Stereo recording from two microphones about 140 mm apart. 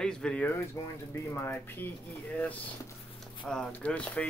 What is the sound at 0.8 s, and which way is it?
Speech, 20° left (ahead or behind).